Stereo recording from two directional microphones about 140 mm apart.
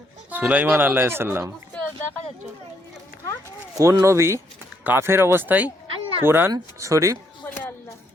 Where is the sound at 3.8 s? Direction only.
20° right (ahead or behind).